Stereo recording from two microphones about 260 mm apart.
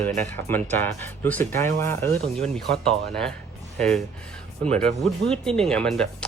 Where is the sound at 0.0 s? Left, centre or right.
Centre.